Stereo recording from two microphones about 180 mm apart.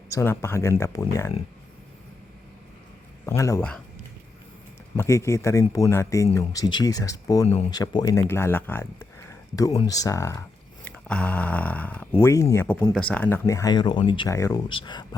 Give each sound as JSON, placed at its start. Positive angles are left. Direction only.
{"t": 0.1, "sound": "speech", "side_deg": 15}
{"t": 3.2, "sound": "speech", "side_deg": 15}
{"t": 4.9, "sound": "speech", "side_deg": 15}